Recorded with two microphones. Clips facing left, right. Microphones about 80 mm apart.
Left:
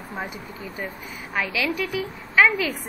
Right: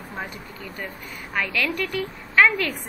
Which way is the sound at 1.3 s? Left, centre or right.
Centre.